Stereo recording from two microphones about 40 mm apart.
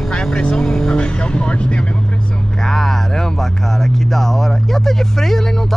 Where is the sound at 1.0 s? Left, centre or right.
Left.